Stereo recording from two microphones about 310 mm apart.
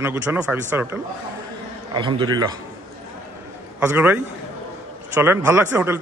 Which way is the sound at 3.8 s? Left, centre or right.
Centre.